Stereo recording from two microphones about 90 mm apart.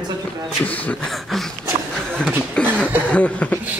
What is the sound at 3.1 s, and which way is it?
Speech, 15° left (ahead or behind).